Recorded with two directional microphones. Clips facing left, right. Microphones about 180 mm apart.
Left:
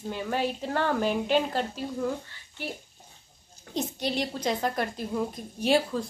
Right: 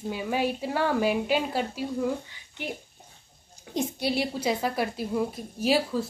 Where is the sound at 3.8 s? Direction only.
10° right (ahead or behind).